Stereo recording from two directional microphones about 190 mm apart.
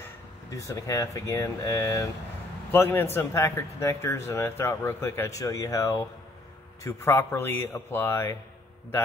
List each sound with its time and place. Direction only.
0.0 s speech: 15° left (ahead or behind)